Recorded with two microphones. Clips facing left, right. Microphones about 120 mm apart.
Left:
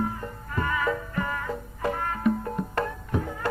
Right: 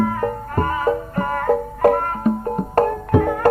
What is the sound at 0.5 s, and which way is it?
Music, 45° right (ahead or behind).